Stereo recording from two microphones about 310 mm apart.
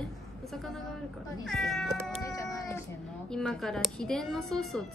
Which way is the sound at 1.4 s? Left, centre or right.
Centre.